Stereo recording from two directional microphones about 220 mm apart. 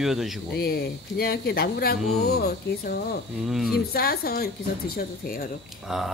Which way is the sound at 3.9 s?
45° left (ahead or behind).